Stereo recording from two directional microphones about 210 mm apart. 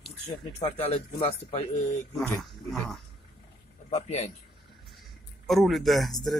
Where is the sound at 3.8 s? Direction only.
30° left (ahead or behind).